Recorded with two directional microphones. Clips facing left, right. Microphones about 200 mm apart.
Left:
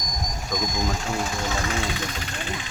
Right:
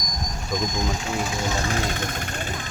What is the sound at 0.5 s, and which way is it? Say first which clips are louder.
Speech: right 1 dB; centre (ahead or behind).